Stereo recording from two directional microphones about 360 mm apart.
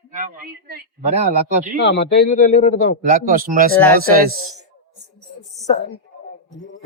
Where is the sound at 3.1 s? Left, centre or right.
Right.